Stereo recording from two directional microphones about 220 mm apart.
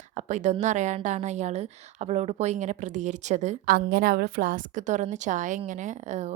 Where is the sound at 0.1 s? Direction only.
30° right (ahead or behind).